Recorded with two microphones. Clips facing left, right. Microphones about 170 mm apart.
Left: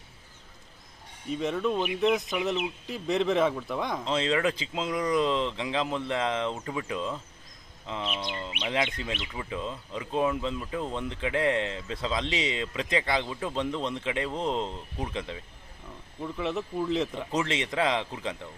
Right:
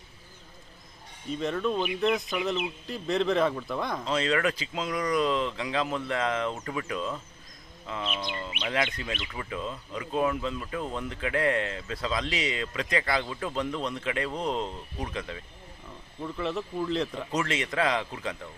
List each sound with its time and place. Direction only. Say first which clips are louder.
1.3 s speech: left 1 dB; 10° left (ahead or behind)
2.0 s speech: left 2 dB; centre (ahead or behind)
2.4 s speech: left 1 dB; 15° left (ahead or behind)
3.2 s speech: even; 5° left (ahead or behind)
3.7 s speech: even; 15° left (ahead or behind)